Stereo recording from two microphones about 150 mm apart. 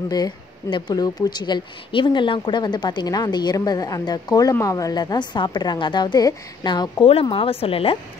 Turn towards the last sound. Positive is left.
turn(degrees=40)  # may be behind; listen again after turning